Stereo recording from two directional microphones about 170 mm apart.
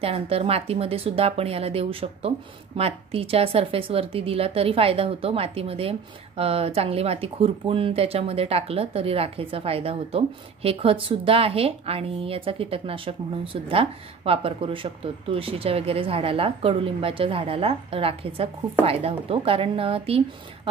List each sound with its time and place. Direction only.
0.0 s speech: 35° right (ahead or behind)